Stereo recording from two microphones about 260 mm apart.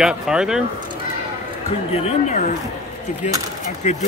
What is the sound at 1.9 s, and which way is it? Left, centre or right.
Speech, left.